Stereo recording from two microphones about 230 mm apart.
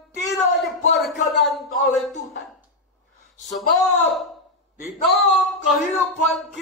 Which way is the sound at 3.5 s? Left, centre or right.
Centre.